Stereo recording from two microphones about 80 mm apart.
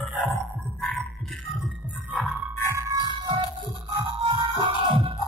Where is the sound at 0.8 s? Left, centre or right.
Centre.